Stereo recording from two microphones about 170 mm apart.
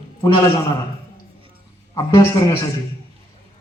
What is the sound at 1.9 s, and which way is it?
Speech, 25° left (ahead or behind).